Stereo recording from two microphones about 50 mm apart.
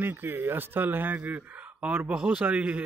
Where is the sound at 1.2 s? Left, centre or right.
Right.